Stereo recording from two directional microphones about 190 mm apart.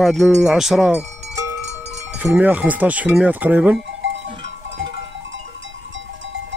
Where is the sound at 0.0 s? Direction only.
Centre (ahead or behind).